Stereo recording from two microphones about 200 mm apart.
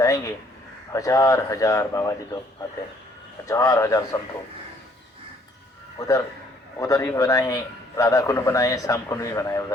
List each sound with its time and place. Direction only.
0.9 s a man's voice: 15° left (ahead or behind)
3.4 s a man's voice: 15° left (ahead or behind)
6.0 s a man's voice: 15° left (ahead or behind)